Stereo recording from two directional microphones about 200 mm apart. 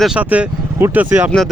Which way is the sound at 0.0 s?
5° right (ahead or behind).